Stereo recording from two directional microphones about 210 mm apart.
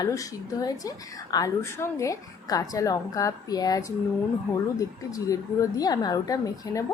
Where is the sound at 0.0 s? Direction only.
15° left (ahead or behind).